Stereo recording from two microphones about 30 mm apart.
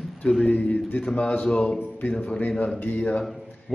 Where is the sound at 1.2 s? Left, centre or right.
Left.